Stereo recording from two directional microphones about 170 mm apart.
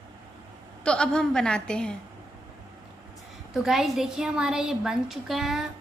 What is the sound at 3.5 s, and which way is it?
A woman's voice, centre (ahead or behind).